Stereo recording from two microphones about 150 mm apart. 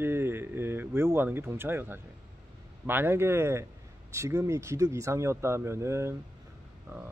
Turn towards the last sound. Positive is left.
turn(degrees=-20)  # may be behind; listen again after turning